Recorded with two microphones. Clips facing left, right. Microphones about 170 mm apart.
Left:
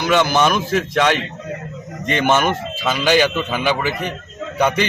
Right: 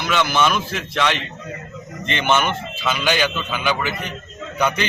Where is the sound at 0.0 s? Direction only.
45° left (ahead or behind).